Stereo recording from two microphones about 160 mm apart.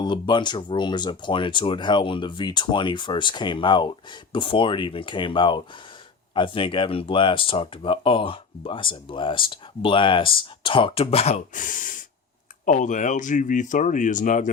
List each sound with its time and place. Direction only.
0.0 s speech: 30° left (ahead or behind); by 14.5 s 55° left (ahead or behind)